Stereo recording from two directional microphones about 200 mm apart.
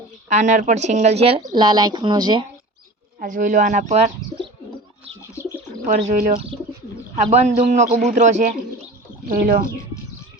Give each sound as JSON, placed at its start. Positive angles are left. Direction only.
{"t": 0.3, "sound": "speech", "side_deg": -35}
{"t": 1.4, "sound": "speech", "side_deg": -20}
{"t": 3.2, "sound": "speech", "side_deg": -40}
{"t": 5.8, "sound": "speech", "side_deg": -40}
{"t": 6.3, "sound": "speech", "side_deg": -30}
{"t": 9.3, "sound": "speech", "side_deg": -50}